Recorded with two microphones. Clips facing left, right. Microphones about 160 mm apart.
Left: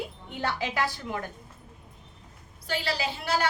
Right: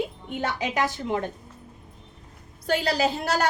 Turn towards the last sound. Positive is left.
turn(degrees=-40)  # may be behind; listen again after turning